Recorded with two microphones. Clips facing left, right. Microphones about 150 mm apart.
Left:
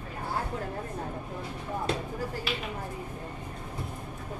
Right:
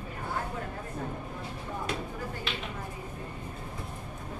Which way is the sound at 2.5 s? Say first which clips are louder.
Left 3 dB; 5° left (ahead or behind).